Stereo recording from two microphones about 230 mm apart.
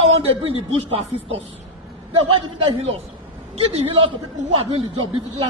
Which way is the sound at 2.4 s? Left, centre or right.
Right.